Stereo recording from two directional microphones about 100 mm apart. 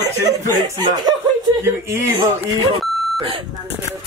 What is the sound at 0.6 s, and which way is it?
Speech, 45° right (ahead or behind).